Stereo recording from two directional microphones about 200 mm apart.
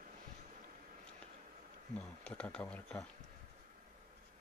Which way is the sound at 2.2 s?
5° left (ahead or behind).